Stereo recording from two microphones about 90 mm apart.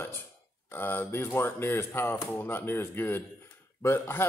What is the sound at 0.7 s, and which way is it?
Speech, 25° left (ahead or behind).